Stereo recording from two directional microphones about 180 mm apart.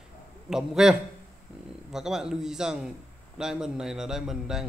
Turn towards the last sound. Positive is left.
turn(degrees=0)  # may be behind; listen again after turning